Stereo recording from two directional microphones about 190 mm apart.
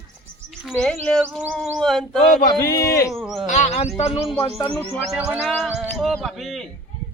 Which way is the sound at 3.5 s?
35° left (ahead or behind).